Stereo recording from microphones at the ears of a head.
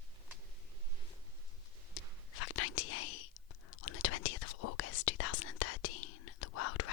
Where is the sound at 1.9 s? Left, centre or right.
Left.